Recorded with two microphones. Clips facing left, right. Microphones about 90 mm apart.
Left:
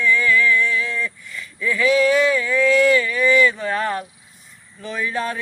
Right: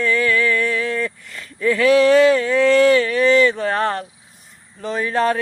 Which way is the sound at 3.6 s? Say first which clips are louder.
Right 3 dB; 55° right (ahead or behind).